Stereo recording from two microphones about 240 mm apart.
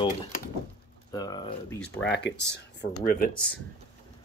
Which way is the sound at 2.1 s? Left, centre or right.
Left.